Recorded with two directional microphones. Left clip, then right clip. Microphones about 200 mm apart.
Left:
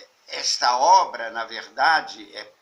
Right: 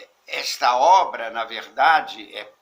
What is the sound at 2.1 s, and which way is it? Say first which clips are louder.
Speech: right 4 dB; 35° right (ahead or behind).